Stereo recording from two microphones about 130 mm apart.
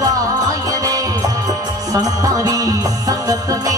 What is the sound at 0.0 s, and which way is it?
Music, 25° right (ahead or behind).